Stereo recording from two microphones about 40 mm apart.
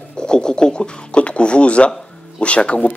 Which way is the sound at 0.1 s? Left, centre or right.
Left.